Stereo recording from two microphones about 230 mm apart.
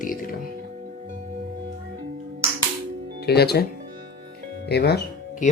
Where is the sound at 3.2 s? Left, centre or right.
Left.